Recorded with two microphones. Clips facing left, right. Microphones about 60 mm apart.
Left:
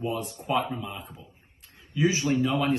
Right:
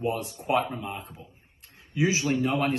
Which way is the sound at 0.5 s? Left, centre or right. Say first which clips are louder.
Right 1 dB; right.